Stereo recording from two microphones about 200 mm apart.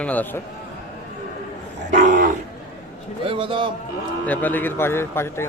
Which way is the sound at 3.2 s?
25° right (ahead or behind).